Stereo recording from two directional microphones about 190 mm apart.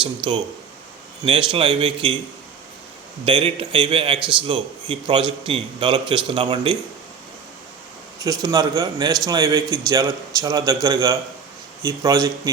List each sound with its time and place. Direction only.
1.2 s a man's voice: 25° right (ahead or behind)
3.2 s a man's voice: 25° right (ahead or behind)
8.2 s a man's voice: 20° right (ahead or behind)